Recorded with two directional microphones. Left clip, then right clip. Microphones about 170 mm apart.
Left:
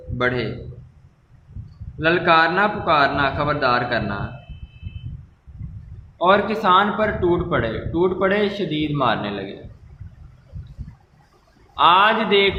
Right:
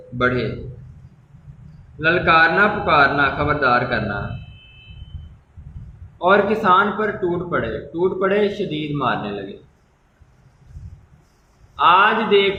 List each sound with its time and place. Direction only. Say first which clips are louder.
2.0 s a man's voice: right 1 dB; 50° left (ahead or behind)
6.1 s a man's voice: right 1 dB; 45° left (ahead or behind)
11.7 s a man's voice: right 1 dB; 45° left (ahead or behind)